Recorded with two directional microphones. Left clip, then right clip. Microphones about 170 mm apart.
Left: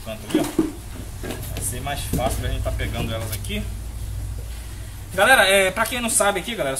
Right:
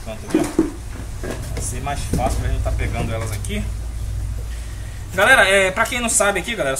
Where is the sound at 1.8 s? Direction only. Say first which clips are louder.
Right 2 dB; 20° left (ahead or behind).